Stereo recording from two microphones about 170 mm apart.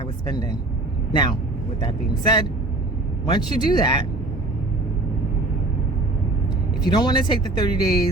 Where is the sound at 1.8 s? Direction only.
25° left (ahead or behind).